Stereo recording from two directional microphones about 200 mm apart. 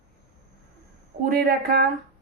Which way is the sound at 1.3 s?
50° right (ahead or behind).